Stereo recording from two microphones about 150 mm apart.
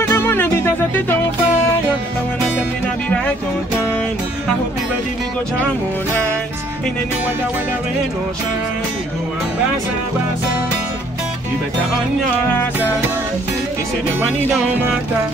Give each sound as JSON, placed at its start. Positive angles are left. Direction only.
{"t": 0.0, "sound": "music", "side_deg": 15}